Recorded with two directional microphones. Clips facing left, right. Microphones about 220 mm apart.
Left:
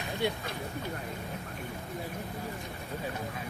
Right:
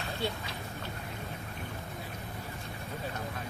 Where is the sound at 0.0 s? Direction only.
15° left (ahead or behind).